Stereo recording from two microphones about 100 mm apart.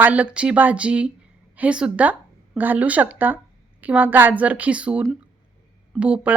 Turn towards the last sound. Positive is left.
turn(degrees=-15)  # may be behind; listen again after turning